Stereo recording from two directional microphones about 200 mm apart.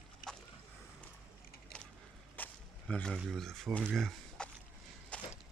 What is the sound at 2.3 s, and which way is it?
Speech, 5° left (ahead or behind).